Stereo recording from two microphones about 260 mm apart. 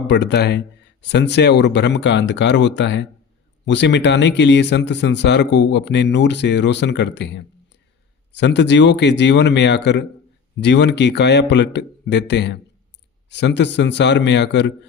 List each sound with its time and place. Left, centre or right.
0.1 s speech: left